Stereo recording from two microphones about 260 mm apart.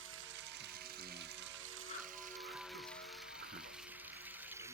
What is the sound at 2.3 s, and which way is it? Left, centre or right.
Music, centre.